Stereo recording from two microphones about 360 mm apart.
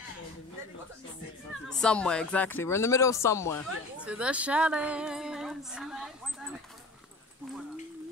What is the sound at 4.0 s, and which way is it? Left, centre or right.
A woman's voice, centre.